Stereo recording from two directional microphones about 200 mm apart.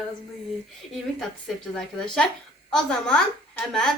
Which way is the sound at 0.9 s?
Centre (ahead or behind).